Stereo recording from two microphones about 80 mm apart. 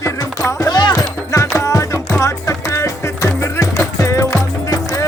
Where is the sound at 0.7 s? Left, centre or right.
Left.